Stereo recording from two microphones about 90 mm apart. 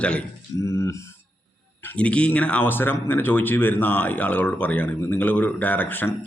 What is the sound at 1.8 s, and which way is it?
Speech, 15° left (ahead or behind).